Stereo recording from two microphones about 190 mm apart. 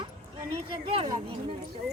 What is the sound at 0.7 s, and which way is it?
Speech, 30° right (ahead or behind).